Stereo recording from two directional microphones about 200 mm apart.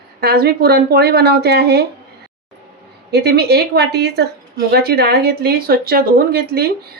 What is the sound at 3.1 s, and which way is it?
Speech, 55° right (ahead or behind).